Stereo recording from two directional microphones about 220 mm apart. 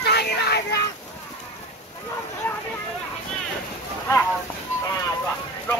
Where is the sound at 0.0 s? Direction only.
50° left (ahead or behind).